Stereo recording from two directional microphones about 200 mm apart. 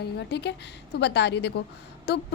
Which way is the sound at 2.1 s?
60° left (ahead or behind).